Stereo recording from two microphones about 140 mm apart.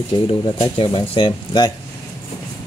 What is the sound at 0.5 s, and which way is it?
Speech, 40° left (ahead or behind).